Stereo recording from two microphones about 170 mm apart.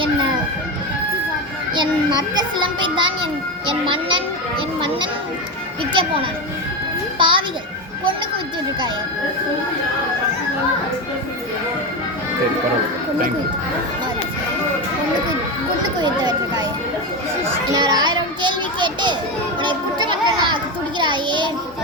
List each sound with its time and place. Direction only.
2.1 s a child's voice: 25° right (ahead or behind)
5.9 s a child's voice: 30° right (ahead or behind)
16.0 s speech: 25° right (ahead or behind)
17.7 s children playing: 25° right (ahead or behind)
21.0 s a sound: 25° right (ahead or behind)